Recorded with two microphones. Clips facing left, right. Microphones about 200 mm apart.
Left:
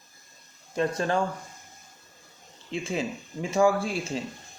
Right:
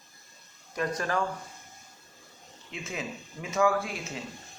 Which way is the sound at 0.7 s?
25° left (ahead or behind).